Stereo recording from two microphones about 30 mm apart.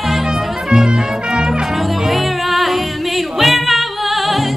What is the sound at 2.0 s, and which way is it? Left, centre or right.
Music, centre.